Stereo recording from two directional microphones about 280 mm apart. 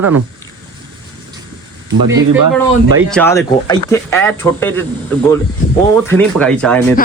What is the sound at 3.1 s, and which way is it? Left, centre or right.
A man's voice, centre.